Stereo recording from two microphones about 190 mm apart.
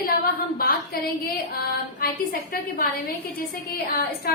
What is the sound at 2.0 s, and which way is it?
Speech, 50° left (ahead or behind).